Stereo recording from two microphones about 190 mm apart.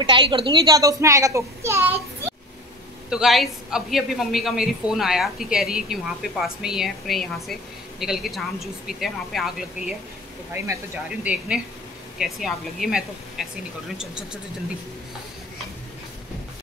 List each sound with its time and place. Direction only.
0.0 s a child's voice: 25° right (ahead or behind)
3.1 s a man's voice: centre (ahead or behind)
11.2 s a man's voice: 5° right (ahead or behind)